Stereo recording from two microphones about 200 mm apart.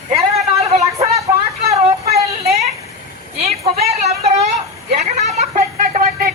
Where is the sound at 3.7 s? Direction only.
50° right (ahead or behind).